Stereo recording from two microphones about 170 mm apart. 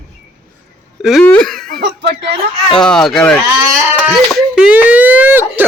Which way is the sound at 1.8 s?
85° right.